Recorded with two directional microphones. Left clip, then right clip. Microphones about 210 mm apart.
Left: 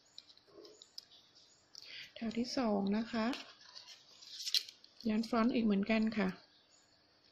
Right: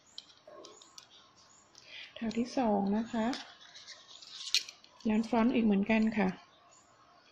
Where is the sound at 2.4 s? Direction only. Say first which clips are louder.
Right 4 dB; 10° left (ahead or behind).